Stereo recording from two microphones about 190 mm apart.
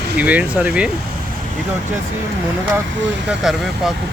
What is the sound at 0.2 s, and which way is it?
Speech, 10° right (ahead or behind).